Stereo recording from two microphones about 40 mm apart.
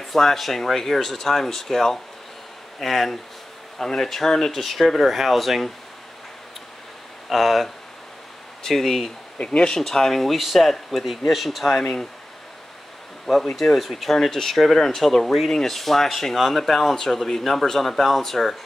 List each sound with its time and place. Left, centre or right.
0.0 s speech: centre
7.2 s speech: centre
9.4 s speech: left
9.7 s speech: centre
13.6 s speech: centre